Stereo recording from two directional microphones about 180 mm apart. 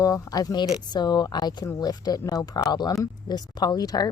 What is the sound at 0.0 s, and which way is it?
Speech, 20° left (ahead or behind).